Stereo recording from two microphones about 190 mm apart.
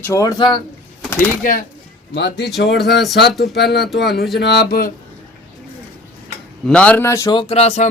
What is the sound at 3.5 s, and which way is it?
Speech, 60° left (ahead or behind).